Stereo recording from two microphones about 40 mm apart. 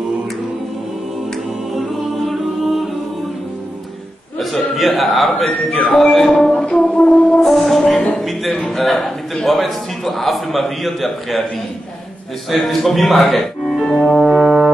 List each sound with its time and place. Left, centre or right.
1.7 s music: centre
4.4 s a man's voice: centre
6.5 s a sound: left
7.0 s music: left
7.3 s music: centre
8.6 s a man's voice: centre
12.4 s speech: centre
14.2 s brass instrument: centre